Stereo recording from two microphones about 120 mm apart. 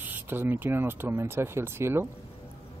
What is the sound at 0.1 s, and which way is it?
Speech, 15° right (ahead or behind).